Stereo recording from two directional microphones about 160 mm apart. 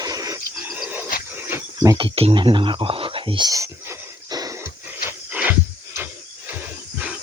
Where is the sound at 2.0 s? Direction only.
35° right (ahead or behind).